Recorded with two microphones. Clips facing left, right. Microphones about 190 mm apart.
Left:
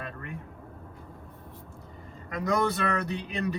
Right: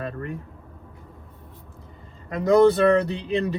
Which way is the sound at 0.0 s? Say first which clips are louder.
Right 8 dB; 35° right (ahead or behind).